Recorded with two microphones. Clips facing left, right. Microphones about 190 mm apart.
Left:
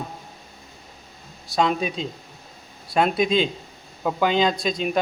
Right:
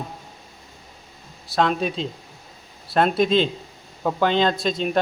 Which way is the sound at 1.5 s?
Centre (ahead or behind).